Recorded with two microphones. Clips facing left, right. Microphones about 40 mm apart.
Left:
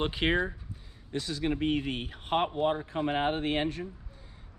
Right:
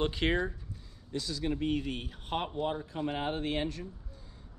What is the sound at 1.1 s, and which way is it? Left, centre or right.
Speech, left.